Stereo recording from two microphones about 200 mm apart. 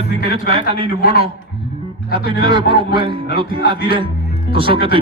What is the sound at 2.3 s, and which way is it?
A man's voice, 25° right (ahead or behind).